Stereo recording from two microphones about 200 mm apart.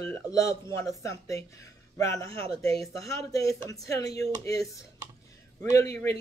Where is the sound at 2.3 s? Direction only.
30° right (ahead or behind).